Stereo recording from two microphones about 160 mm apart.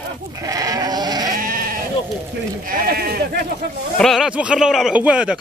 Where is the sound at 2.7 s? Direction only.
70° right (ahead or behind).